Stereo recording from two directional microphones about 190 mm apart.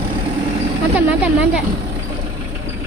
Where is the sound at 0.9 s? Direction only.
5° right (ahead or behind).